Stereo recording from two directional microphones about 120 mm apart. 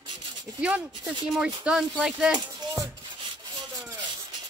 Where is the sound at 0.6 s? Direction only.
10° right (ahead or behind).